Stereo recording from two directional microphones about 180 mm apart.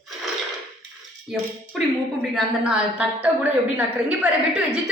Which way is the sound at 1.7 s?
Centre (ahead or behind).